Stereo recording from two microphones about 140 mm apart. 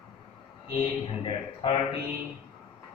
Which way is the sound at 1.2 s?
40° left (ahead or behind).